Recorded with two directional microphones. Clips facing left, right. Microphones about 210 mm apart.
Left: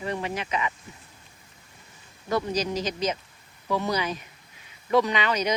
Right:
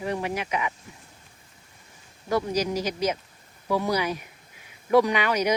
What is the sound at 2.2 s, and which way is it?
Speech, 10° right (ahead or behind).